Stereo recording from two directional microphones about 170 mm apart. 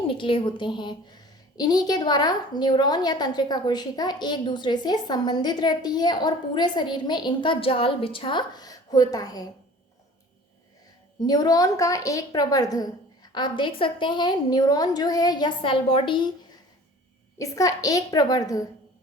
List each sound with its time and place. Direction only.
0.1 s a woman's voice: 30° left (ahead or behind)
11.2 s a woman's voice: 20° left (ahead or behind)
17.3 s a woman's voice: 20° left (ahead or behind)